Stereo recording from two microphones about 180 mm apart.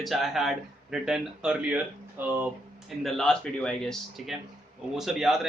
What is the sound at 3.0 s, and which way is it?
Speech, 5° left (ahead or behind).